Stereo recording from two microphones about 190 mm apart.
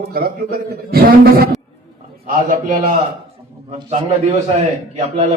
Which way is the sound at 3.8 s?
35° right (ahead or behind).